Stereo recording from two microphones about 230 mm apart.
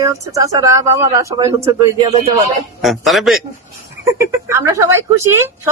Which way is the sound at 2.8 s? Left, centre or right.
Centre.